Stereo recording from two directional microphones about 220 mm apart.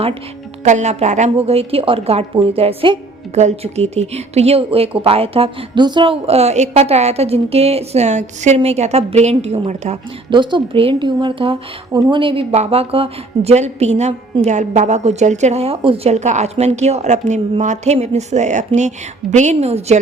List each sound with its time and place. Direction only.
0.6 s a woman's voice: 30° right (ahead or behind)